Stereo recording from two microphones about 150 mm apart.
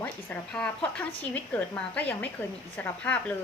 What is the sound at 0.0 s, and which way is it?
A woman's voice, 10° left (ahead or behind).